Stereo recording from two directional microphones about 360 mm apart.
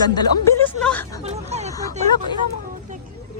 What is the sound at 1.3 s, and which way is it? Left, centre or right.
Speech, centre.